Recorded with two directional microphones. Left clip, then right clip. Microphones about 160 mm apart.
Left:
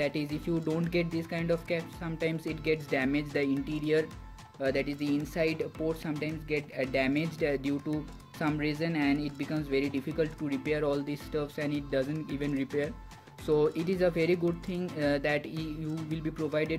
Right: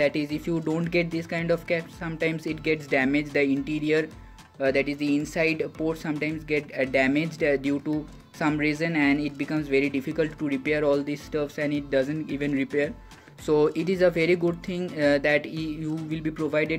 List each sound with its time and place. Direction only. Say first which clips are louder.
0.0 s speech: right 7 dB; 5° right (ahead or behind)